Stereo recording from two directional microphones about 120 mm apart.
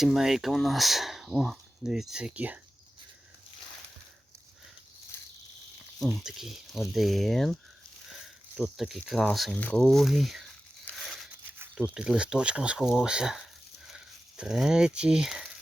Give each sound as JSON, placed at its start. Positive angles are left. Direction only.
{"t": 0.0, "sound": "speech", "side_deg": 0}
{"t": 5.1, "sound": "a sound", "side_deg": 20}
{"t": 6.0, "sound": "speech", "side_deg": 0}
{"t": 10.9, "sound": "tearing", "side_deg": 0}
{"t": 11.7, "sound": "speech", "side_deg": -5}